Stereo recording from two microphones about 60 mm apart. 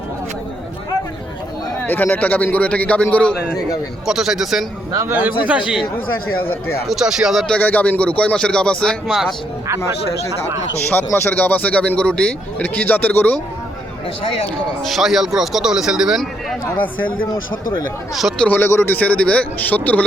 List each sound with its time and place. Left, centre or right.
1.9 s speech: left
4.0 s a man's voice: centre
5.1 s a man's voice: right
6.8 s a man's voice: centre
7.6 s speech: left
9.0 s a man's voice: centre
10.9 s speech: left
14.8 s a man's voice: centre
18.1 s a man's voice: centre
18.4 s speech: left